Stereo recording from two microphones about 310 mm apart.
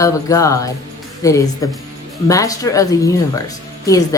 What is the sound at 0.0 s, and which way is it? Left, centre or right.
A woman's voice, centre.